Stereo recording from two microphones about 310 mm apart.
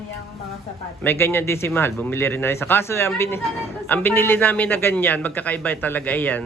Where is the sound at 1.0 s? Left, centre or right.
Centre.